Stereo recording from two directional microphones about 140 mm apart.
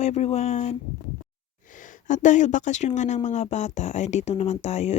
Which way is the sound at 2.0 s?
60° left (ahead or behind).